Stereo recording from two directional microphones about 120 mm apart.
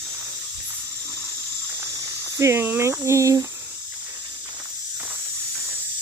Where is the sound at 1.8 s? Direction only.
25° right (ahead or behind).